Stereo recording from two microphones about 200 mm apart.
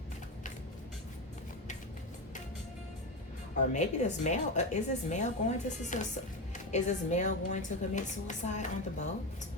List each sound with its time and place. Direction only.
3.7 s a woman's voice: 35° left (ahead or behind)